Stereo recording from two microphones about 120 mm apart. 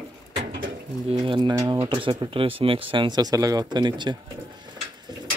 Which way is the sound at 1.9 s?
45° right (ahead or behind).